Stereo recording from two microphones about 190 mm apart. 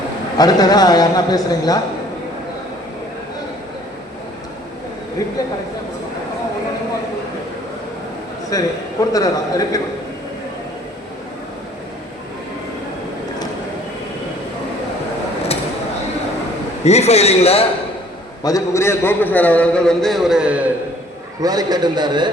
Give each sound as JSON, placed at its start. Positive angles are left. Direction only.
{"t": 0.3, "sound": "a man's voice", "side_deg": 20}
{"t": 5.4, "sound": "a sound", "side_deg": 20}
{"t": 8.4, "sound": "a man's voice", "side_deg": 20}
{"t": 16.8, "sound": "a man's voice", "side_deg": 35}
{"t": 18.4, "sound": "a man's voice", "side_deg": 15}
{"t": 21.4, "sound": "a man's voice", "side_deg": -20}